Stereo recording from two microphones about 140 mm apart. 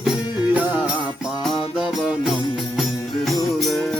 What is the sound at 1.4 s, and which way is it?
Music, centre (ahead or behind).